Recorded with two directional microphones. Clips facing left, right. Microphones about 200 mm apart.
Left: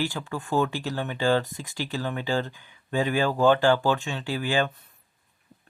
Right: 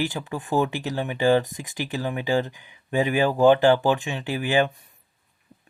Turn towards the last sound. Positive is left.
turn(degrees=-15)  # may be behind; listen again after turning